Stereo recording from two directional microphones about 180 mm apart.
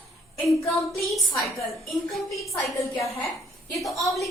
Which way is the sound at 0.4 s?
15° left (ahead or behind).